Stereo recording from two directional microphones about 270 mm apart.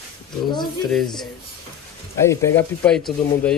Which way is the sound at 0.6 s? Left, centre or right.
Centre.